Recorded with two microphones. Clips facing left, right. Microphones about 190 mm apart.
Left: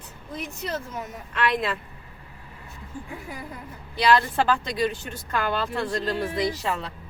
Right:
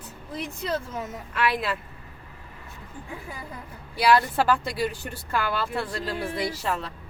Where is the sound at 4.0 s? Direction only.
5° right (ahead or behind).